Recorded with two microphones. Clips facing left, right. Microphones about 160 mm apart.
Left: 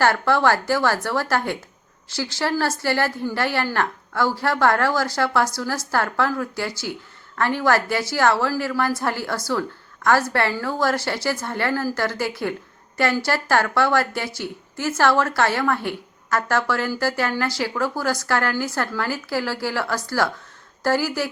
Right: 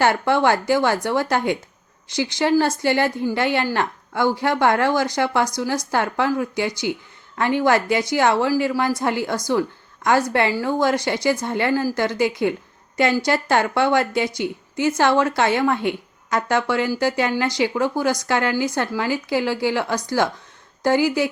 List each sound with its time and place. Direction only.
0.0 s a woman's voice: 15° right (ahead or behind)